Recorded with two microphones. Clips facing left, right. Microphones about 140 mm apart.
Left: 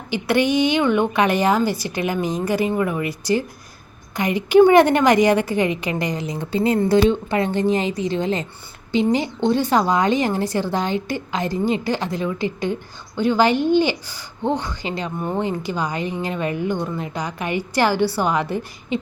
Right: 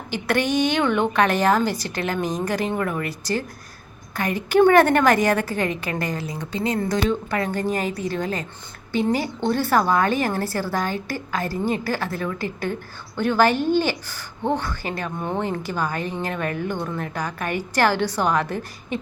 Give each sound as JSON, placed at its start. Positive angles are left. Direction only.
{"t": 0.1, "sound": "a woman's voice", "side_deg": 10}